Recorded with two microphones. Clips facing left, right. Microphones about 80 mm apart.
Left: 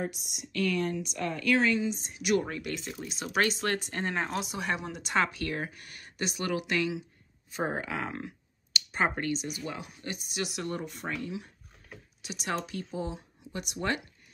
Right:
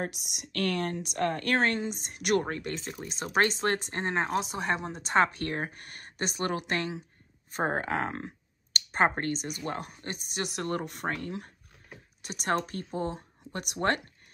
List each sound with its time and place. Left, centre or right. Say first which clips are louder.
0.0 s speech: even; right
2.4 s speech: right 1 dB; right